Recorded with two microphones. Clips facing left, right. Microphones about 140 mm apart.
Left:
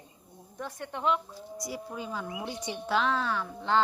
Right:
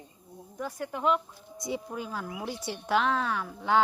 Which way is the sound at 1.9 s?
5° right (ahead or behind).